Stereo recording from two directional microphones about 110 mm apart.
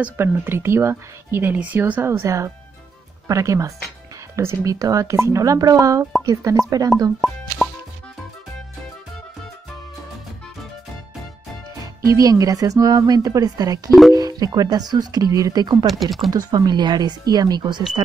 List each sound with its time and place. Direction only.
0.0 s speech: 20° right (ahead or behind)
7.2 s speech: centre (ahead or behind)
7.6 s music: 5° right (ahead or behind)
12.0 s speech: 30° right (ahead or behind)
15.9 s speech: centre (ahead or behind)
16.3 s speech: 35° right (ahead or behind)